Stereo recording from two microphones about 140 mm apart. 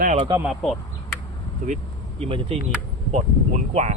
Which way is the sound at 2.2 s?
45° right (ahead or behind).